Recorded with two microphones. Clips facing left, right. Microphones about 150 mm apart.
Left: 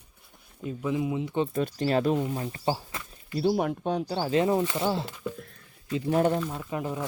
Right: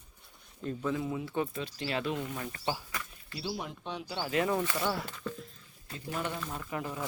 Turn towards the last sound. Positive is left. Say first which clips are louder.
# left 5 dB
turn(degrees=20)  # may be behind; listen again after turning